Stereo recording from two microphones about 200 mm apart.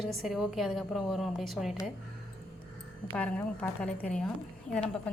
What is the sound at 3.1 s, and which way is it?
A woman's voice, 5° left (ahead or behind).